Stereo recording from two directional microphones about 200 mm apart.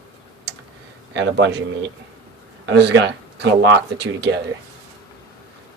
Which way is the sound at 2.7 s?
60° right (ahead or behind).